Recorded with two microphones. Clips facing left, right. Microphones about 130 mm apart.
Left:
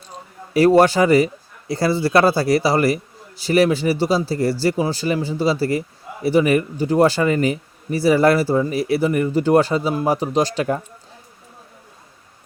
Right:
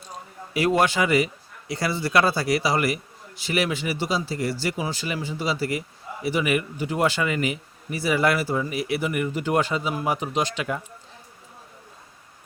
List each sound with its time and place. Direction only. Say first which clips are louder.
0.5 s speech: left 8 dB; 35° left (ahead or behind)